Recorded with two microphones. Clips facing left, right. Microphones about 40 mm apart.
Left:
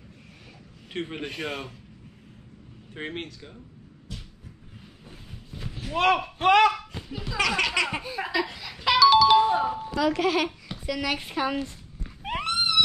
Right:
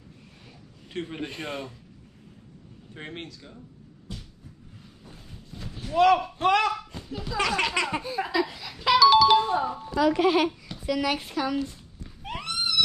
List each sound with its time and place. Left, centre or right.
0.9 s speech: left
1.2 s speech: left
2.9 s speech: left
5.0 s a sound: centre
5.9 s speech: left
7.1 s a sound: centre
7.4 s speech: left
8.5 s music: centre
9.4 s music: centre
9.9 s speech: left
10.9 s a woman's voice: centre
11.3 s speech: left
12.2 s horse: left